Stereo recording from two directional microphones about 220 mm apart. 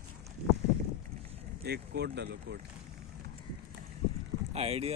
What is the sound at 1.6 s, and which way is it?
Speech, 50° right (ahead or behind).